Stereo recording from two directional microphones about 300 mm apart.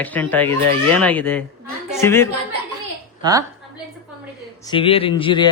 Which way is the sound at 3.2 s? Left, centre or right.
Centre.